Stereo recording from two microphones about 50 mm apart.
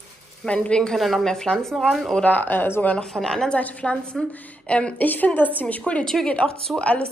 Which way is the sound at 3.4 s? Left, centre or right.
Left.